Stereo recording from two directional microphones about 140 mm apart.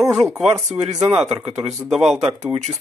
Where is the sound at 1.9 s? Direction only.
Centre (ahead or behind).